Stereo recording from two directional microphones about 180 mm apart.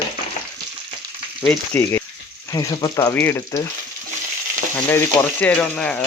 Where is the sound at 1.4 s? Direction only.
5° left (ahead or behind).